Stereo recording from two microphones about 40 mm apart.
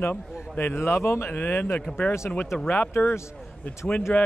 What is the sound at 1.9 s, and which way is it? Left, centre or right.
Speech, left.